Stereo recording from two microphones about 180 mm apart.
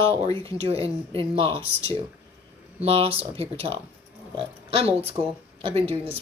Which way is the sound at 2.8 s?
35° right (ahead or behind).